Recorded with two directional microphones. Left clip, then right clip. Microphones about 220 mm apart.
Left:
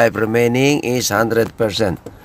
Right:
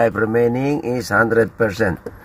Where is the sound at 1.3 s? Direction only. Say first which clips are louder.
Even; 15° left (ahead or behind).